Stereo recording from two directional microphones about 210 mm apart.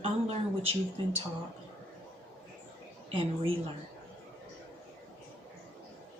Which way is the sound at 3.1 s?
25° right (ahead or behind).